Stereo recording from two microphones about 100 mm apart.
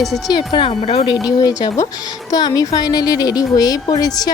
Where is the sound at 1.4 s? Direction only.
40° left (ahead or behind).